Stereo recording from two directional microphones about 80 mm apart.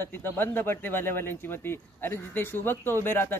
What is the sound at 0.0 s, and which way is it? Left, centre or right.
Speech, left.